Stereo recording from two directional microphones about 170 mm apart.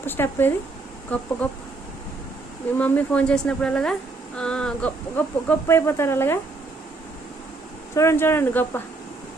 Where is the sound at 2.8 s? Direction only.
10° left (ahead or behind).